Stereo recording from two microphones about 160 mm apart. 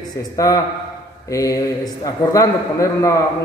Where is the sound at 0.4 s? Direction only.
20° left (ahead or behind).